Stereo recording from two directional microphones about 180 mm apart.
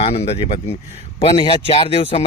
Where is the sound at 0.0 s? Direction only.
35° left (ahead or behind).